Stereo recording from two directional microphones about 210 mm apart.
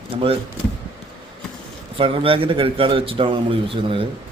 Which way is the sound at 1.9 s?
25° right (ahead or behind).